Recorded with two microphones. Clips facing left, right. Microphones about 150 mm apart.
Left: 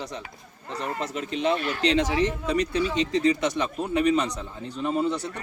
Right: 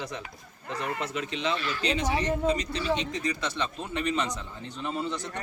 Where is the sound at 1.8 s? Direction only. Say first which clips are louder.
Left 5 dB; 90° left.